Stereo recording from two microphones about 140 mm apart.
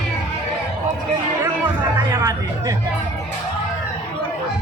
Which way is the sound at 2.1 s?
25° right (ahead or behind).